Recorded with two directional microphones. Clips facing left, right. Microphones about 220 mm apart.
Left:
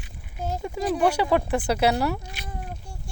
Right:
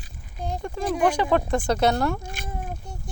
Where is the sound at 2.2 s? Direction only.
50° right (ahead or behind).